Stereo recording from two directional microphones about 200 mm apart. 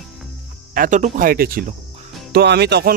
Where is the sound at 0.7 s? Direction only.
40° right (ahead or behind).